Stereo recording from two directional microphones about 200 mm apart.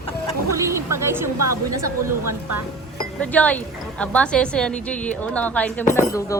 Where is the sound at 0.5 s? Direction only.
15° right (ahead or behind).